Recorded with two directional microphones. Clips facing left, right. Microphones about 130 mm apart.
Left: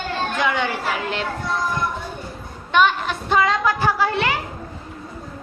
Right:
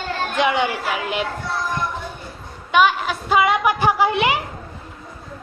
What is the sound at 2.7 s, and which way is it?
A woman's voice, 5° right (ahead or behind).